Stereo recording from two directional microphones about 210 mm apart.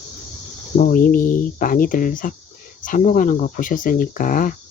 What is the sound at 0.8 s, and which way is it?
Speech, 40° left (ahead or behind).